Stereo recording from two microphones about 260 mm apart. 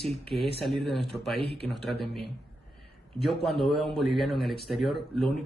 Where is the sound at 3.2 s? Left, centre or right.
Centre.